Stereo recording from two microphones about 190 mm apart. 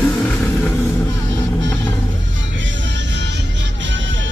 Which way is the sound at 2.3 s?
80° right.